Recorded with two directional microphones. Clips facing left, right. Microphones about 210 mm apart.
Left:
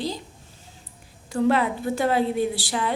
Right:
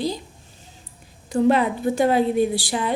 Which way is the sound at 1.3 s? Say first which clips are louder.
Right 3 dB; 20° right (ahead or behind).